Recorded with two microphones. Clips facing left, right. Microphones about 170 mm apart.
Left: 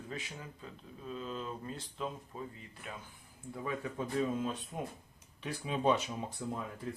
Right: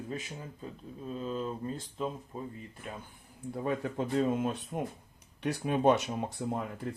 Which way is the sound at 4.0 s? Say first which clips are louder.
Right 4 dB; 70° right (ahead or behind).